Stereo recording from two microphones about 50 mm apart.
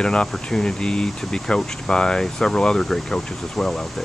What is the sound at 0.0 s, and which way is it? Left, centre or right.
A woman's voice, centre.